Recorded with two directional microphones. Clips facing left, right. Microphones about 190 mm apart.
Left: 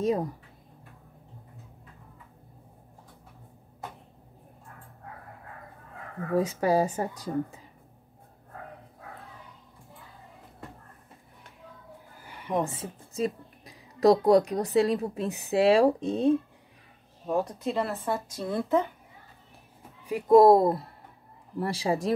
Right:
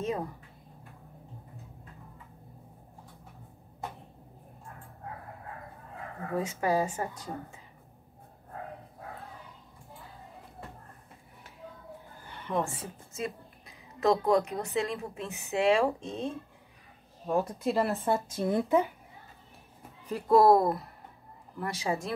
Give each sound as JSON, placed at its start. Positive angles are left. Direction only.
{"t": 0.0, "sound": "a woman's voice", "side_deg": 35}
{"t": 6.3, "sound": "a woman's voice", "side_deg": 35}
{"t": 12.3, "sound": "a woman's voice", "side_deg": 10}
{"t": 13.1, "sound": "a woman's voice", "side_deg": 35}
{"t": 17.3, "sound": "speech", "side_deg": 0}
{"t": 18.0, "sound": "a woman's voice", "side_deg": -20}
{"t": 20.1, "sound": "a woman's voice", "side_deg": 15}